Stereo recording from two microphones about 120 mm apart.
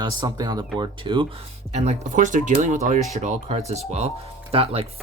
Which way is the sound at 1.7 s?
65° right (ahead or behind).